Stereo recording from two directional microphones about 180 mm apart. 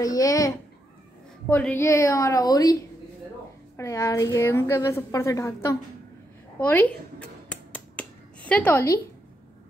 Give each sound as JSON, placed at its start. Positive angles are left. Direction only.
{"t": 0.0, "sound": "a child's voice", "side_deg": 20}
{"t": 7.7, "sound": "finger snapping", "side_deg": 5}